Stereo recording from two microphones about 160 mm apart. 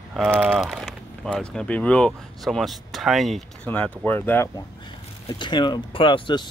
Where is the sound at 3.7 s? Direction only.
10° left (ahead or behind).